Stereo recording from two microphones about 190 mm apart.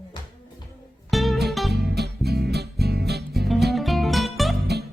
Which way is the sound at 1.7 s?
60° right (ahead or behind).